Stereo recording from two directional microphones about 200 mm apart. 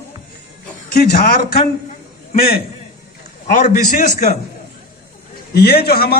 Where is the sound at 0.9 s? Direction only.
45° left (ahead or behind).